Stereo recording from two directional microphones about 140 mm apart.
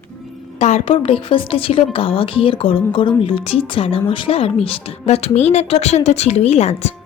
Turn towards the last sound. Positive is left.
turn(degrees=50)  # may be behind; listen again after turning